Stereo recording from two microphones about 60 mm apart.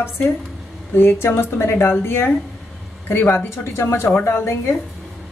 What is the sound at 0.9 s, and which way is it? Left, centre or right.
Speech, left.